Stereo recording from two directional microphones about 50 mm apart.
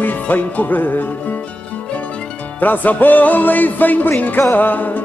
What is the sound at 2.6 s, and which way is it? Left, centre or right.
Speech, left.